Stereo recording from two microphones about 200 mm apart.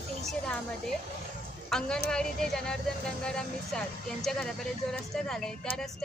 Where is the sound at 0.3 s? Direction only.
5° left (ahead or behind).